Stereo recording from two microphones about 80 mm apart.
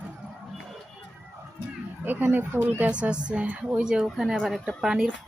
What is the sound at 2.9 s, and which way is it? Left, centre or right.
A woman's voice, centre.